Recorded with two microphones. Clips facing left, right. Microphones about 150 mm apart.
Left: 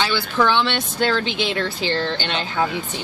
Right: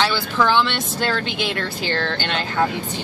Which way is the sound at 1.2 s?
45° right (ahead or behind).